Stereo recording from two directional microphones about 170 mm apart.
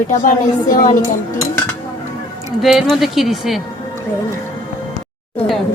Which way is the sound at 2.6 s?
Centre (ahead or behind).